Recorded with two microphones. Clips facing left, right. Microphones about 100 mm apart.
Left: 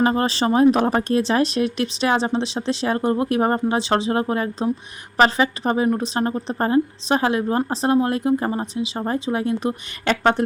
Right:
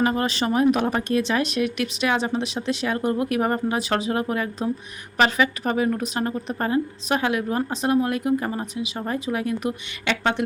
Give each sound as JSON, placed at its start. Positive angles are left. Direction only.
{"t": 0.0, "sound": "speech", "side_deg": 35}